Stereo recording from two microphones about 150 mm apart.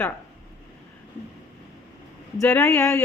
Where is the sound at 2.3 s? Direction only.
15° left (ahead or behind).